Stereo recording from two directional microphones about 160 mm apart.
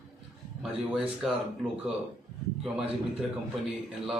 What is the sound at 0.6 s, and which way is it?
Speech, centre (ahead or behind).